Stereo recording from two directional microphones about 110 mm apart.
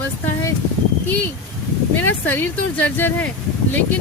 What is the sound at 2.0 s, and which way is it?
Speech, 15° left (ahead or behind).